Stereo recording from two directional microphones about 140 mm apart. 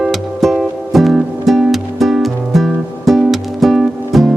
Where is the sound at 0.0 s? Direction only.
Centre (ahead or behind).